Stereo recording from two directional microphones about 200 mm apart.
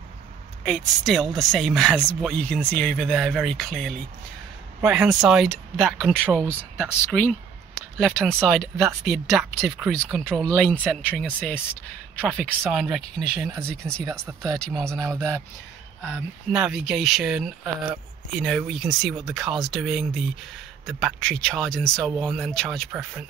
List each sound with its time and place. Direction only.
0.7 s speech: centre (ahead or behind)
15.1 s speech: 15° right (ahead or behind)
16.1 s speech: centre (ahead or behind)